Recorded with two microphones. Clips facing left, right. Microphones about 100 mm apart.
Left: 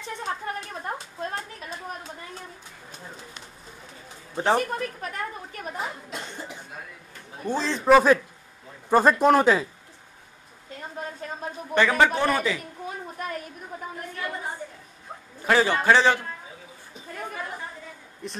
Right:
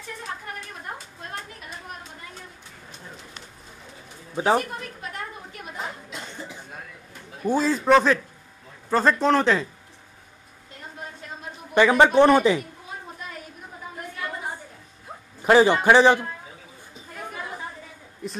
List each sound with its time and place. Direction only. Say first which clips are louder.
4.4 s speech: right 1 dB; 5° right (ahead or behind)
7.4 s a man's voice: right 5 dB; 10° right (ahead or behind)
7.8 s speech: left 4 dB; 5° left (ahead or behind)
11.7 s speech: right 4 dB; 15° right (ahead or behind)
13.2 s a sound: left 6 dB; 55° left (ahead or behind)
15.4 s a man's voice: right 4 dB; 20° right (ahead or behind)
18.2 s speech: right 3 dB; 5° right (ahead or behind)